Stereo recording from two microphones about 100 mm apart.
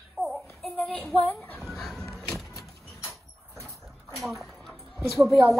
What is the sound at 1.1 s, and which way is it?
Speech, 15° left (ahead or behind).